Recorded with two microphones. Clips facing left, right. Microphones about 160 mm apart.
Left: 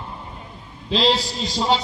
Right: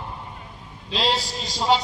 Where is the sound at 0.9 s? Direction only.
10° right (ahead or behind).